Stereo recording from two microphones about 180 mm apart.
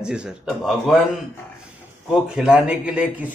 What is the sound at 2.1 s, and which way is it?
A man's voice, centre (ahead or behind).